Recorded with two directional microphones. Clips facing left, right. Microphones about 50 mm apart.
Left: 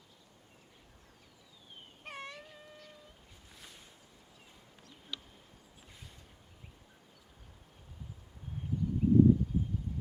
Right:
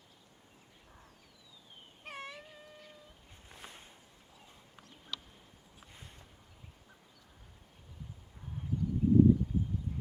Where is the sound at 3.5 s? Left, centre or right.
Right.